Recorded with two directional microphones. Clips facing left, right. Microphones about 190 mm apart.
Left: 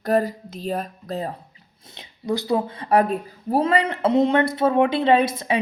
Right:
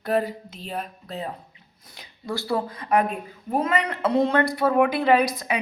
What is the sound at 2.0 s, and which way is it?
Speech, 20° left (ahead or behind).